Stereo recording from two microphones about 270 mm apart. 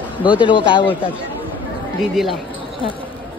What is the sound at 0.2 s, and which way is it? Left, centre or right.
Speech, centre.